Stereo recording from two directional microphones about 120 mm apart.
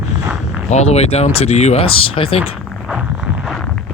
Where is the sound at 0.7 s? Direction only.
65° left (ahead or behind); by 2.4 s 50° left (ahead or behind).